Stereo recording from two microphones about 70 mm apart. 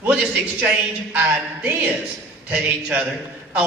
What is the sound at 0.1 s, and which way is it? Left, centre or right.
A man's voice, centre.